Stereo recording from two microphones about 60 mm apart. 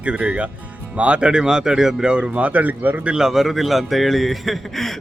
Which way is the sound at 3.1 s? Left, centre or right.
Centre.